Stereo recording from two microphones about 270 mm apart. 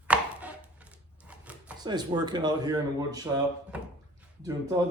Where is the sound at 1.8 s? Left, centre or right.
Centre.